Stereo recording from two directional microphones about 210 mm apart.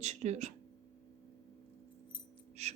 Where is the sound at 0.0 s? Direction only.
30° right (ahead or behind).